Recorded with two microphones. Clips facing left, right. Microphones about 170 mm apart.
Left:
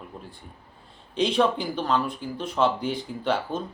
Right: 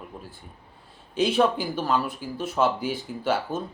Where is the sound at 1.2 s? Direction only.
5° right (ahead or behind).